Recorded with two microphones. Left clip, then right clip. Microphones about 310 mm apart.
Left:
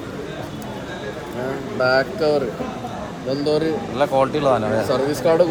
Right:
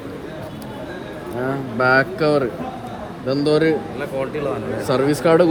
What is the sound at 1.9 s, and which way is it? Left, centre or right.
Speech, right.